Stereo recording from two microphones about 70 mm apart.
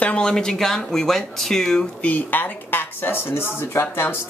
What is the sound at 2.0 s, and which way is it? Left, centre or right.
Speech, left.